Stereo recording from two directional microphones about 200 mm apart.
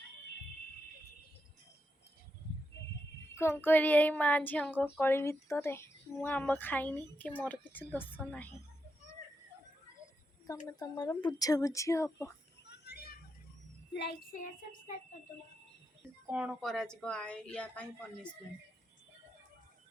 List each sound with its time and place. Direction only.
3.3 s speech: 10° left (ahead or behind)
10.8 s speech: 20° left (ahead or behind)
12.6 s children playing: 55° left (ahead or behind)
13.9 s child singing: 55° left (ahead or behind)
16.2 s a woman's voice: 5° right (ahead or behind)